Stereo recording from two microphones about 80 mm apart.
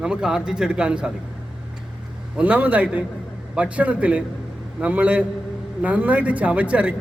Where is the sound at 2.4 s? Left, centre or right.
Centre.